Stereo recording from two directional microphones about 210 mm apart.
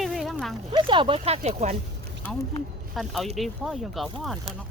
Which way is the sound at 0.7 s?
25° right (ahead or behind).